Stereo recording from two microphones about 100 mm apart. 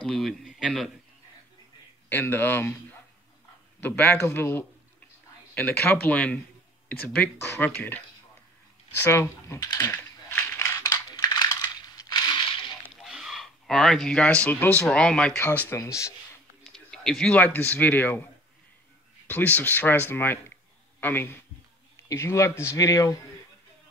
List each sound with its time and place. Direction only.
0.0 s a man's voice: 5° left (ahead or behind)
2.0 s speech: 20° left (ahead or behind)
9.0 s speech: 25° left (ahead or behind)
9.6 s speech: 40° left (ahead or behind)
9.8 s a sound: 20° left (ahead or behind)
10.8 s coin: 40° left (ahead or behind)
12.9 s a sound: centre (ahead or behind)
14.6 s speech: 15° left (ahead or behind)
15.3 s speech: 20° left (ahead or behind)
15.7 s speech: 30° left (ahead or behind)
16.6 s a sound: 5° left (ahead or behind)
17.3 s speech: 15° left (ahead or behind)
19.2 s speech: 15° left (ahead or behind); by 23.2 s 35° left (ahead or behind)